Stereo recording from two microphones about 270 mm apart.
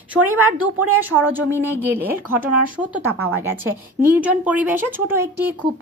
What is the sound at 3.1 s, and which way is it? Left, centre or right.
Speech, right.